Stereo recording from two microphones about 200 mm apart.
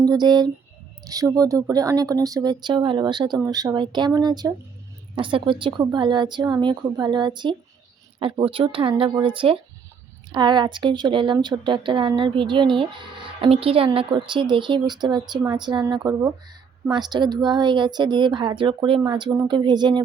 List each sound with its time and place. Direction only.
0.0 s a woman's voice: 20° right (ahead or behind)